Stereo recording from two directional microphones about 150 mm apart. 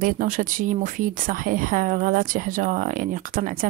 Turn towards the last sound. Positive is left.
turn(degrees=-65)  # may be behind; listen again after turning